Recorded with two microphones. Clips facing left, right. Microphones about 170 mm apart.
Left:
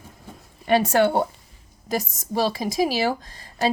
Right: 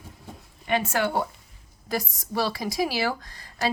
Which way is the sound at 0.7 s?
35° left (ahead or behind).